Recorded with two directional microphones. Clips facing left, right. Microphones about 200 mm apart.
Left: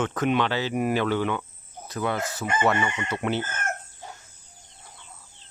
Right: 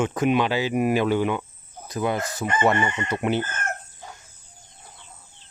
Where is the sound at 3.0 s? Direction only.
15° right (ahead or behind).